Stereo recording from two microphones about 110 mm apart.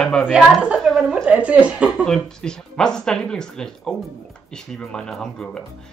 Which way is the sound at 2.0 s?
5° left (ahead or behind).